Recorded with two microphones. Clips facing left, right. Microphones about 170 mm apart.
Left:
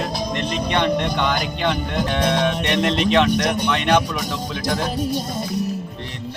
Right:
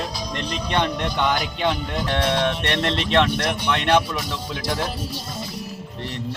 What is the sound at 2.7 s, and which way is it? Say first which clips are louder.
Speech: left 3 dB; 15° left (ahead or behind).